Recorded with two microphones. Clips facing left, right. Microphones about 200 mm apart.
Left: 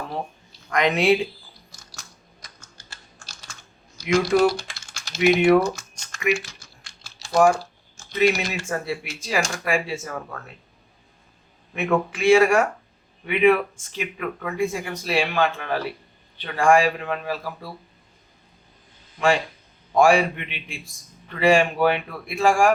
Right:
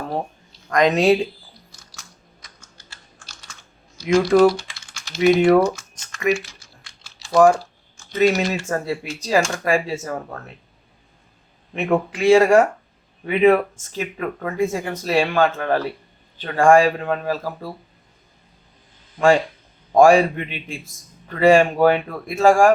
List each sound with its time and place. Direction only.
0.7 s speech: 40° right (ahead or behind)
2.4 s computer keyboard: 40° left (ahead or behind)
4.0 s speech: 40° right (ahead or behind)
4.7 s typing: 40° left (ahead or behind)
5.4 s speech: 40° right (ahead or behind)
11.7 s speech: 35° right (ahead or behind)
19.9 s speech: 45° right (ahead or behind)